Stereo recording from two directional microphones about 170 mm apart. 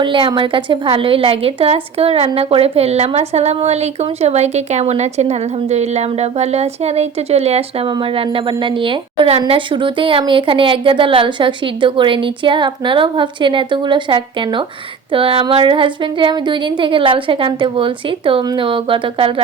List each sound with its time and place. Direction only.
0.0 s a woman's voice: 30° right (ahead or behind)